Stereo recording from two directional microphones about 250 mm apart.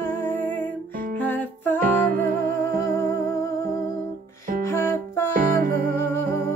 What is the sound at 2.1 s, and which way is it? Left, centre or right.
Music, right.